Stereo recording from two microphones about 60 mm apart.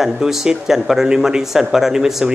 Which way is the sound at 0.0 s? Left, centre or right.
Centre.